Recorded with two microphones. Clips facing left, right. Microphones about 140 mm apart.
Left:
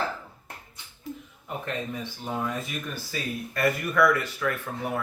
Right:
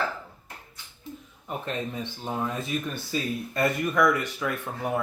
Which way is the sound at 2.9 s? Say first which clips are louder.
Right 3 dB; 25° right (ahead or behind).